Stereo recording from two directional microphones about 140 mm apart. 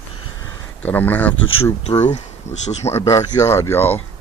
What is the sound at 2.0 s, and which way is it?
Speech, 55° left (ahead or behind).